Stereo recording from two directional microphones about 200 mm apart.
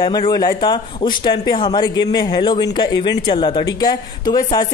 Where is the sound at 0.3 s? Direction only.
20° left (ahead or behind).